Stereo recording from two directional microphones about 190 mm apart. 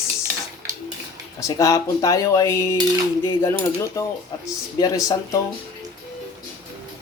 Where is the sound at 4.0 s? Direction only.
20° left (ahead or behind).